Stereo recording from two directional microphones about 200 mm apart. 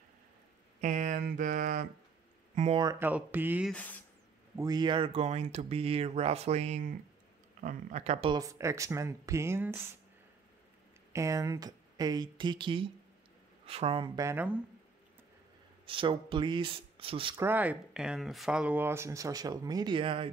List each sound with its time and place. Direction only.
0.7 s speech: 40° right (ahead or behind)
2.8 s speech: 15° right (ahead or behind)
3.7 s speech: 10° left (ahead or behind)
4.6 s speech: 20° right (ahead or behind)
11.1 s speech: 15° right (ahead or behind)
15.8 s speech: 25° right (ahead or behind)
17.4 s speech: 10° right (ahead or behind); by 20.2 s 25° right (ahead or behind)